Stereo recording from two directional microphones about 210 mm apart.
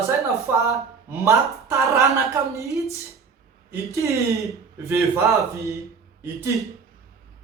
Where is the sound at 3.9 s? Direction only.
15° right (ahead or behind).